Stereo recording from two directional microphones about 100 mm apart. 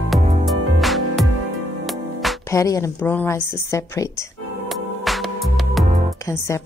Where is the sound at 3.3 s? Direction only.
30° left (ahead or behind).